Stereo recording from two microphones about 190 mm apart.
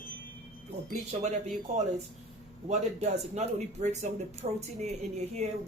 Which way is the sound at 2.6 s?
35° right (ahead or behind).